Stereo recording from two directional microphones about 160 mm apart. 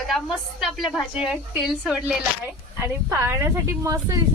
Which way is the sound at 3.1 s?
15° right (ahead or behind).